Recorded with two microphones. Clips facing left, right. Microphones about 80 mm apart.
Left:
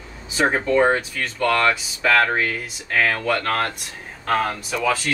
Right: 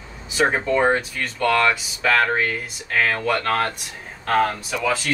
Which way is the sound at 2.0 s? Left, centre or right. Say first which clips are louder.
Left 1 dB; centre.